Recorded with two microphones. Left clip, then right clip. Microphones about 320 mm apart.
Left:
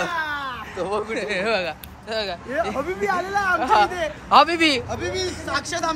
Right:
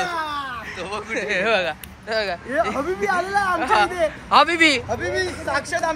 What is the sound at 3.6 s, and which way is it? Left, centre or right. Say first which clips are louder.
Speech: left 1 dB; centre.